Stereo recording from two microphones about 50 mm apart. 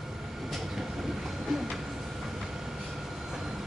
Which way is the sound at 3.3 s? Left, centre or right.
Centre.